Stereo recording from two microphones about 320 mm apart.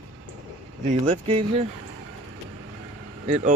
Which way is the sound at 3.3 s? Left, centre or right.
Right.